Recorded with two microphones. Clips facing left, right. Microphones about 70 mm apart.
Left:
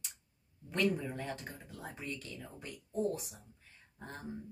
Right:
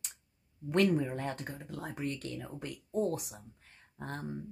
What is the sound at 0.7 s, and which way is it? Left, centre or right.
Speech, right.